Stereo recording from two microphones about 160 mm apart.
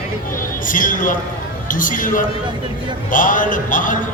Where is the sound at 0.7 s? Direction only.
55° left (ahead or behind).